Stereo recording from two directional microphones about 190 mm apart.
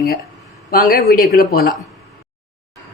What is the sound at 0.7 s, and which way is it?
Speech, 50° left (ahead or behind).